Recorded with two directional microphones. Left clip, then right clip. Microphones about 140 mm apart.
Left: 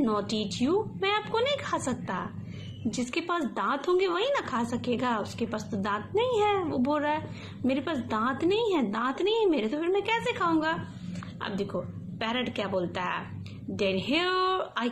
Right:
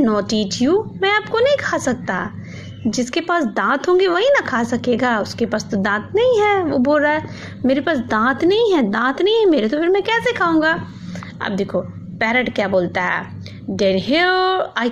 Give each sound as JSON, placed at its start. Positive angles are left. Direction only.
{"t": 0.0, "sound": "a woman's voice", "side_deg": -40}